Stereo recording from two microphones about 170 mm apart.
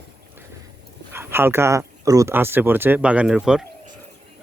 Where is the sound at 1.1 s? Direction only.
15° right (ahead or behind).